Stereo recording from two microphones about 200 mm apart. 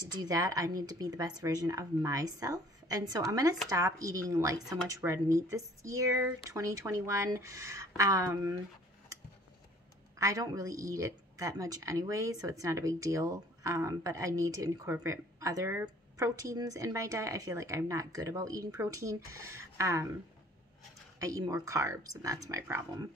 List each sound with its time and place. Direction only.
0.1 s speech: 20° right (ahead or behind)
10.1 s speech: 15° right (ahead or behind)
21.2 s speech: 15° right (ahead or behind)